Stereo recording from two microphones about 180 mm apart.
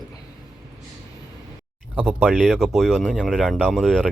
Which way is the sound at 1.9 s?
5° right (ahead or behind).